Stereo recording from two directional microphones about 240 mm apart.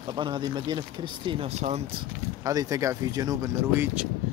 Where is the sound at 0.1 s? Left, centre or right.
Centre.